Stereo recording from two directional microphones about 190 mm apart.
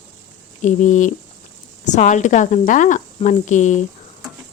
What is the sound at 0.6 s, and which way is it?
Speech, 40° left (ahead or behind).